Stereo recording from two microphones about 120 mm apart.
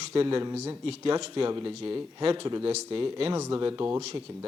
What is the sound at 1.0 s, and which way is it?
Speech, 45° right (ahead or behind).